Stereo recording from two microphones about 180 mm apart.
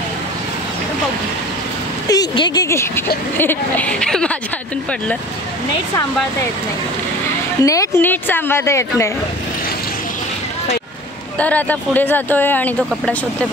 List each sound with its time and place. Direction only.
2.0 s speech: 25° left (ahead or behind); by 4.4 s 5° left (ahead or behind)
7.6 s speech: 20° left (ahead or behind)
11.3 s speech: 10° left (ahead or behind)